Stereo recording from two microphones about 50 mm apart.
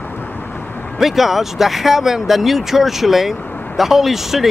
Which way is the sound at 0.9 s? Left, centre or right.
Centre.